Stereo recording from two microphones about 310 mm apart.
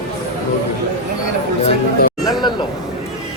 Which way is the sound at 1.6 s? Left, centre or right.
Left.